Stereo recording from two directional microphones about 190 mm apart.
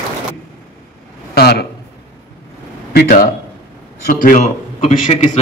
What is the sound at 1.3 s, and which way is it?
Speech, 55° left (ahead or behind).